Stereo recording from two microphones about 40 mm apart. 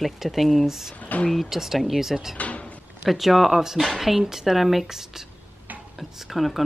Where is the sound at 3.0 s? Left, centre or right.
Centre.